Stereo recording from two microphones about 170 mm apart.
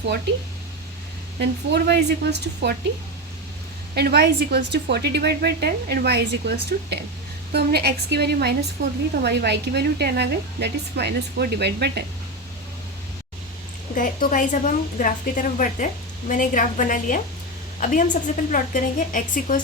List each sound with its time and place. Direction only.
1.4 s a woman's voice: 80° right
3.9 s speech: 65° right (ahead or behind)
7.5 s speech: 70° right (ahead or behind)
13.9 s a woman's voice: 50° left (ahead or behind)